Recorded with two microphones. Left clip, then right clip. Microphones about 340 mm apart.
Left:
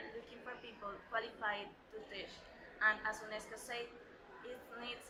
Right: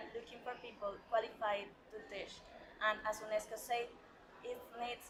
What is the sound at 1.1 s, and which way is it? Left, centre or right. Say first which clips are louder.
Speech: right 3 dB; centre.